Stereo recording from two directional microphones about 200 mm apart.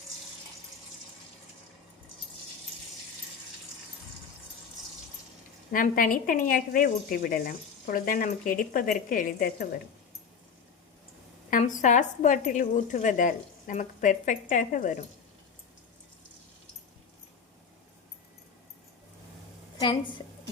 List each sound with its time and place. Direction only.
5.7 s speech: 45° left (ahead or behind)
11.5 s speech: 40° left (ahead or behind)
19.8 s a woman's voice: 25° left (ahead or behind)